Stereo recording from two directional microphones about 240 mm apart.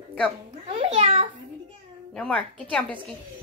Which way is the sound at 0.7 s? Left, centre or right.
Right.